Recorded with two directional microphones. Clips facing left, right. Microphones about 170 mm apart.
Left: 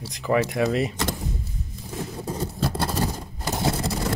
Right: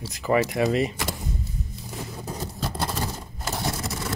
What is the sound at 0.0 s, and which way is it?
Speech, 5° right (ahead or behind).